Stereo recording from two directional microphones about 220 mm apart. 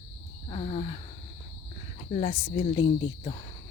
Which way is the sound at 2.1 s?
30° left (ahead or behind).